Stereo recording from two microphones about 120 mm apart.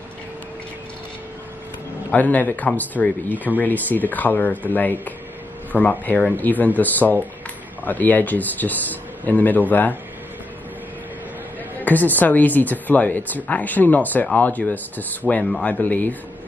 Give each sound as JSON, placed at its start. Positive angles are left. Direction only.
{"t": 2.0, "sound": "speech", "side_deg": 15}
{"t": 11.8, "sound": "speech", "side_deg": 15}